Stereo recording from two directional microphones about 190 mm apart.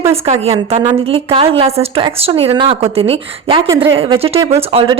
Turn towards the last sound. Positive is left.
turn(degrees=-30)  # may be behind; listen again after turning